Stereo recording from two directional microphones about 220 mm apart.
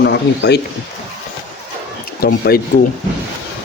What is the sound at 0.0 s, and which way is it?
Speech, 50° left (ahead or behind).